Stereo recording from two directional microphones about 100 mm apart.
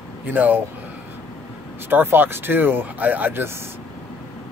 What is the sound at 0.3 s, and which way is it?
Speech, 15° right (ahead or behind).